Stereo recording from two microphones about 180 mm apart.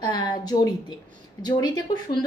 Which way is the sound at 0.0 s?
25° left (ahead or behind).